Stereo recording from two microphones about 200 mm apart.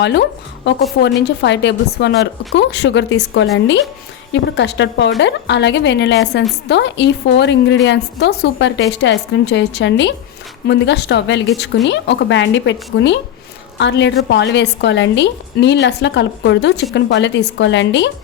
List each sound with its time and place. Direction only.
0.0 s a woman's voice: 60° left (ahead or behind)